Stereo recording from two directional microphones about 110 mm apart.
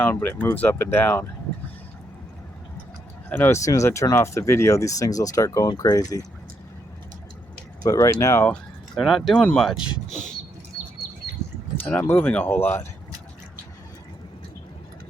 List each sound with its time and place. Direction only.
0.0 s speech: 20° left (ahead or behind)
3.2 s speech: 20° left (ahead or behind)
3.6 s speech: 30° left (ahead or behind)
7.9 s speech: 30° left (ahead or behind)
9.0 s speech: centre (ahead or behind)
9.7 s speech: 10° right (ahead or behind)
11.8 s speech: 15° left (ahead or behind)